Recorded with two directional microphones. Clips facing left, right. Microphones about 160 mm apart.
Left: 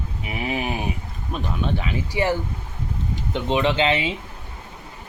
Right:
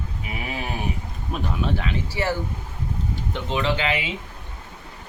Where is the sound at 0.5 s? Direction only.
15° left (ahead or behind).